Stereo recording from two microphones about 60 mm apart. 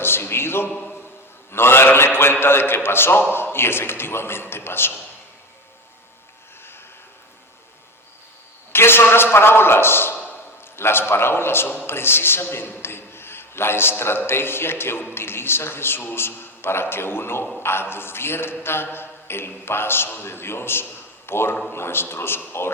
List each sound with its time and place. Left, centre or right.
0.0 s a sound: left
1.5 s a man's voice: left
8.7 s a man's voice: left